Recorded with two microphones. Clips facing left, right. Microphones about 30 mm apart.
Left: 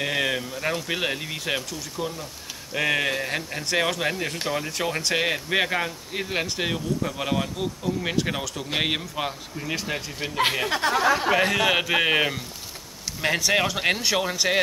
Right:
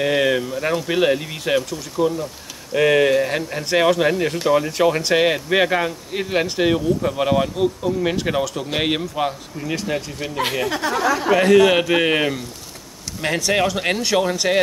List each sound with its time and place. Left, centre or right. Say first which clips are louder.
0.0 s speech: right 7 dB; centre
10.7 s speech: right 1 dB; left
11.3 s speech: right 7 dB; centre